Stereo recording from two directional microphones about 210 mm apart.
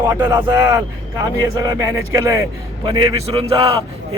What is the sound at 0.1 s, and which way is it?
Speech, 15° right (ahead or behind).